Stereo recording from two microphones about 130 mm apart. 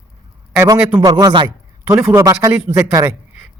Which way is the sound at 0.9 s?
40° right (ahead or behind).